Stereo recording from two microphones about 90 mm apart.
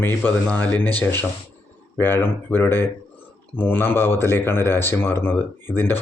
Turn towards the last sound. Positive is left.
turn(degrees=25)  # may be behind; listen again after turning